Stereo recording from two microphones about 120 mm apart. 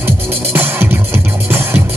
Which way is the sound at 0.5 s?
20° right (ahead or behind).